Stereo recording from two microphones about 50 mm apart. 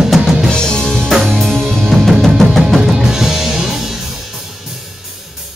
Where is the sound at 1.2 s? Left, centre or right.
Centre.